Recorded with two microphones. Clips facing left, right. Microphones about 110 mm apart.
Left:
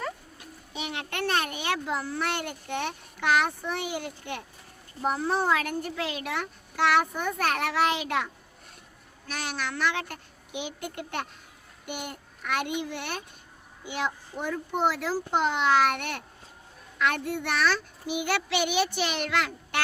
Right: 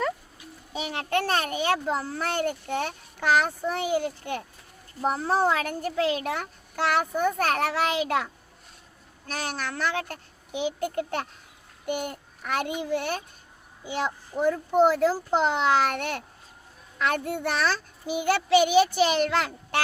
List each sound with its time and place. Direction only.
0.7 s a child's voice: 40° right (ahead or behind)